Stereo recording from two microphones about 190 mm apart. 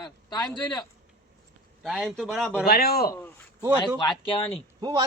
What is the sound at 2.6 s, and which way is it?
Speech, 55° left (ahead or behind).